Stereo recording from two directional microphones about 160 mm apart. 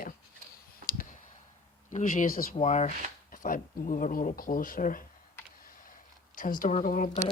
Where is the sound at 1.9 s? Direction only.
50° left (ahead or behind).